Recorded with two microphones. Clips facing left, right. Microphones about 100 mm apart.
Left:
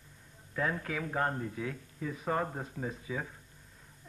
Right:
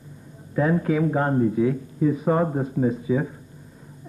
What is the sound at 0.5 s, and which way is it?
Speech, 15° right (ahead or behind).